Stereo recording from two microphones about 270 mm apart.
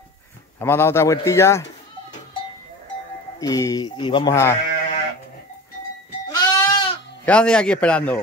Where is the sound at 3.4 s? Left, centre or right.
Centre.